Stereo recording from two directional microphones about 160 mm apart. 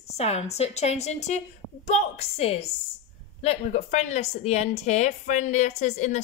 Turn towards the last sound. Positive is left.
turn(degrees=45)  # may be behind; listen again after turning